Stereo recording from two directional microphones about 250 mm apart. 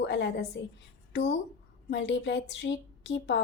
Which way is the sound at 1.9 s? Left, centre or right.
Left.